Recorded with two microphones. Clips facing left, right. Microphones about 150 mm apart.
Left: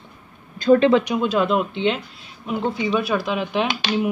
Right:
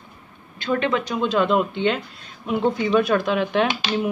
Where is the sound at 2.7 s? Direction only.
5° left (ahead or behind).